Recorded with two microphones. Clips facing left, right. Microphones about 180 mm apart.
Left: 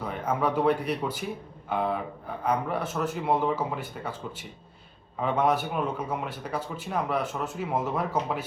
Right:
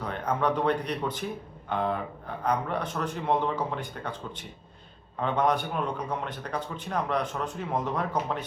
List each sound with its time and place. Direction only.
0.0 s a man's voice: 5° left (ahead or behind)